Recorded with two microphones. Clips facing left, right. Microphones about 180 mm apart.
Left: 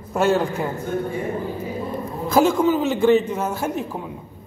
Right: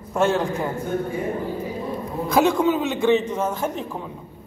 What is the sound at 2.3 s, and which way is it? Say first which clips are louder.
A man's voice: left 2 dB; centre (ahead or behind).